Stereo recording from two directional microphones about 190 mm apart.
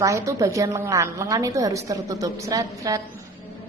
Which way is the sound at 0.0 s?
15° right (ahead or behind).